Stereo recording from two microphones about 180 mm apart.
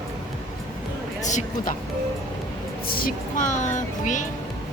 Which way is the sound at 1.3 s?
40° left (ahead or behind).